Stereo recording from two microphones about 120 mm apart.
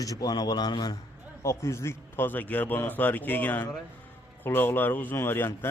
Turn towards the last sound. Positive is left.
turn(degrees=20)  # may be behind; listen again after turning